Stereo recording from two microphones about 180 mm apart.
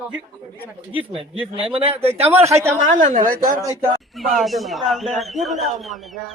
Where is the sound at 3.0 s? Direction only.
45° right (ahead or behind).